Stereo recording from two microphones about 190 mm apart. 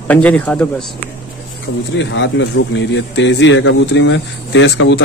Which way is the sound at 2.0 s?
70° left (ahead or behind).